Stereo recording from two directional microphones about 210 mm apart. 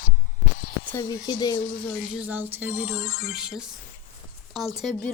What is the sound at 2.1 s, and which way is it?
Speech, 5° right (ahead or behind).